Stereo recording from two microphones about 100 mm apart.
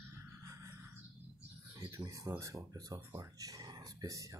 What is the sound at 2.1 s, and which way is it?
Speech, 35° right (ahead or behind).